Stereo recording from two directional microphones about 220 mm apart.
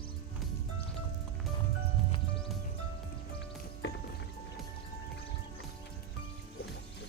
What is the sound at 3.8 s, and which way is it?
Music, 50° left (ahead or behind).